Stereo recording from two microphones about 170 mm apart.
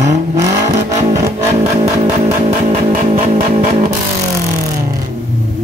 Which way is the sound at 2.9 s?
40° right (ahead or behind).